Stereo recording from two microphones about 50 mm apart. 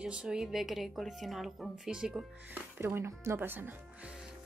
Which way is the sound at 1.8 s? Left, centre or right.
Centre.